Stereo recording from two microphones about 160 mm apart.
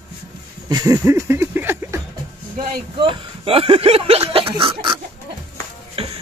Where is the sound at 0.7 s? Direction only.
25° right (ahead or behind).